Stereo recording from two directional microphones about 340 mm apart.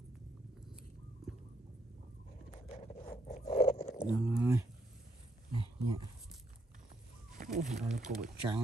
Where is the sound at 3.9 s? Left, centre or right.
Centre.